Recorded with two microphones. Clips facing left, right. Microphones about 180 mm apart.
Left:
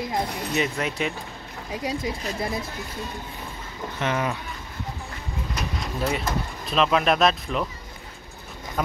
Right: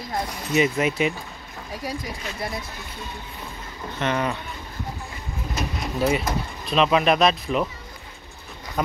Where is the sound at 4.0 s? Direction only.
5° left (ahead or behind).